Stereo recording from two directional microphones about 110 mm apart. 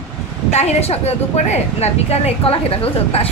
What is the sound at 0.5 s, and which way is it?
A woman's voice, 85° left.